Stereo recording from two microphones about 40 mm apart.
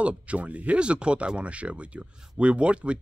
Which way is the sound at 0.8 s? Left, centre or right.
Right.